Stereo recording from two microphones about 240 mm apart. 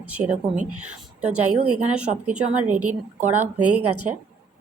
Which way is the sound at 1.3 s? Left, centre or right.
Right.